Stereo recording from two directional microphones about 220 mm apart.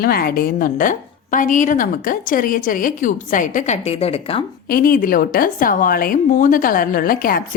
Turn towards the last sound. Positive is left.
turn(degrees=40)  # may be behind; listen again after turning